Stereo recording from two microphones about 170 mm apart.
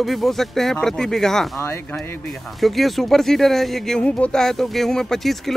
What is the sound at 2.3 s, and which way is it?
Speech, centre (ahead or behind).